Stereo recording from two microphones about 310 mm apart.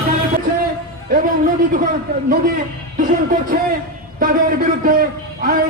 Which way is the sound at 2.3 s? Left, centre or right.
Right.